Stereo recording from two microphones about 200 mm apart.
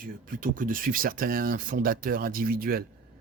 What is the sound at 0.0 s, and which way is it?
Speech, 45° right (ahead or behind).